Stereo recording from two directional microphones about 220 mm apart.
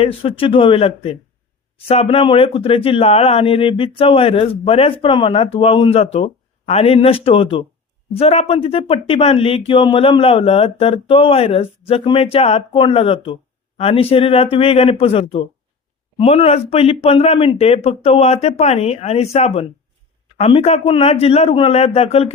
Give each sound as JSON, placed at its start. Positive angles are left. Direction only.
{"t": 0.0, "sound": "speech", "side_deg": 25}